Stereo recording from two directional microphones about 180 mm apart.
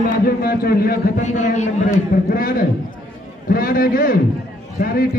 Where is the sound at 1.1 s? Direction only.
40° left (ahead or behind).